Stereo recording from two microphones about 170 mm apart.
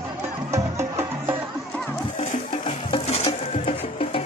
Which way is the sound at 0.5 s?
15° right (ahead or behind).